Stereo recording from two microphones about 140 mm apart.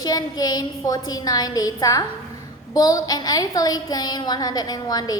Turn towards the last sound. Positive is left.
turn(degrees=25)  # may be behind; listen again after turning